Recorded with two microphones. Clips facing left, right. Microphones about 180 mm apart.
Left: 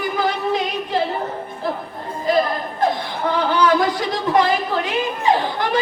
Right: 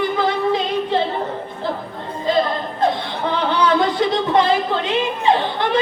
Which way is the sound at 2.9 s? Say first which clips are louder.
Even; 25° right (ahead or behind).